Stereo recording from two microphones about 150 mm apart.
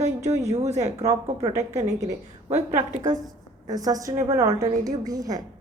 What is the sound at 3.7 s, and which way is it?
A woman's voice, 25° right (ahead or behind).